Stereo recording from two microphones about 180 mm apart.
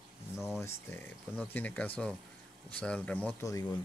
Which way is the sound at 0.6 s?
15° left (ahead or behind).